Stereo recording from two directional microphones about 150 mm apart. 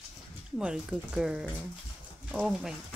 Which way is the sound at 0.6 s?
5° right (ahead or behind).